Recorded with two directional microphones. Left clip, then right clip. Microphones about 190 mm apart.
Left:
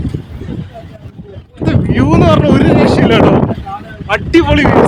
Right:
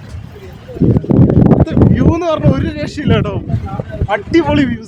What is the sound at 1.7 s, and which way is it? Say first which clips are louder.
Speech: left 1 dB; 35° left (ahead or behind).